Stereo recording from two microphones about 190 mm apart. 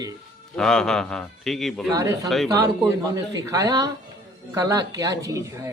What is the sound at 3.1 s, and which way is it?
Speech, 15° right (ahead or behind).